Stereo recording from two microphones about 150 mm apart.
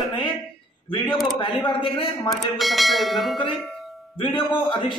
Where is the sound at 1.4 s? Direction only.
35° left (ahead or behind).